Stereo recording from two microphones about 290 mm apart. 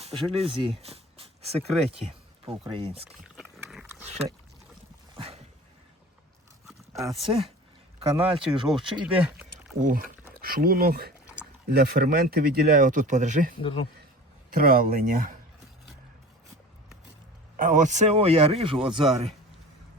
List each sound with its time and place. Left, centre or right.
0.0 s speech: centre
3.3 s pig: centre
5.1 s dog: centre
7.9 s speech: centre
9.0 s speech: centre
9.8 s speech: right
13.6 s speech: centre
14.5 s speech: right
17.6 s speech: right